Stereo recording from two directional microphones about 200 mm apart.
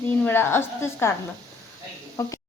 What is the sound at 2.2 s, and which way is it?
Speech, 15° left (ahead or behind).